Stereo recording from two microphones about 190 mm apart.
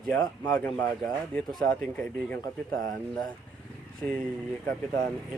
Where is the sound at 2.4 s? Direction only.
20° left (ahead or behind).